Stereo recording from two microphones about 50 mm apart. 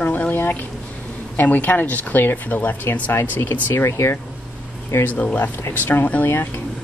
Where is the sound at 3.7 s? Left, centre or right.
Left.